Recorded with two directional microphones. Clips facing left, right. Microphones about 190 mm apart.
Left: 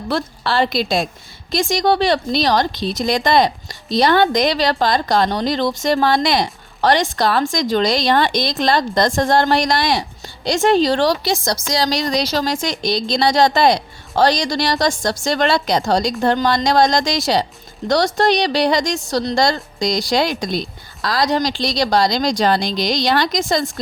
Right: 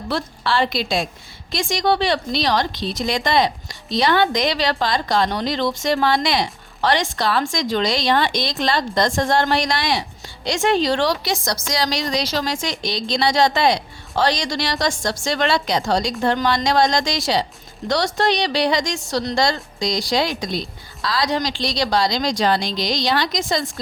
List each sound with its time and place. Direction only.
0.1 s a woman's voice: 40° left (ahead or behind)